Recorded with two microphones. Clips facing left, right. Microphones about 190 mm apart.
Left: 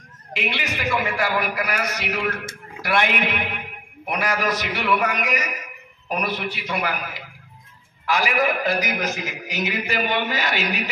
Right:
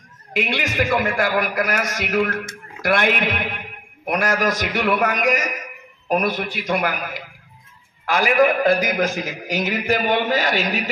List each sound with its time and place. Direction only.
0.3 s a man's voice: 45° right (ahead or behind)